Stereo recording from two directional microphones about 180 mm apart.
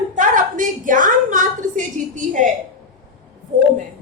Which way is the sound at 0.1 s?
45° right (ahead or behind).